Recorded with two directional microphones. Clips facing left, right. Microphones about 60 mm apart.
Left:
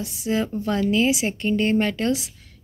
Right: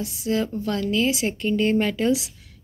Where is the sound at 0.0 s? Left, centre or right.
Centre.